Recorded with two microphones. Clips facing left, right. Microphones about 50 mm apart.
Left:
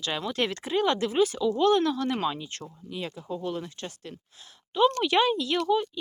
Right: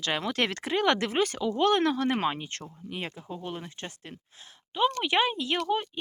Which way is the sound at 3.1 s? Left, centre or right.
Right.